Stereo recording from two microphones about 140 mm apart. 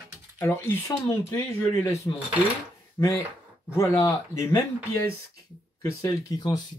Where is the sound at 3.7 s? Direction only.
20° left (ahead or behind).